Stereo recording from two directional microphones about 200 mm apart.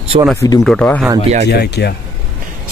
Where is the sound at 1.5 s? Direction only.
55° left (ahead or behind).